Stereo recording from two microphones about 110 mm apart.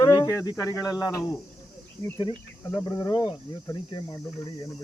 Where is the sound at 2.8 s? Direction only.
30° left (ahead or behind).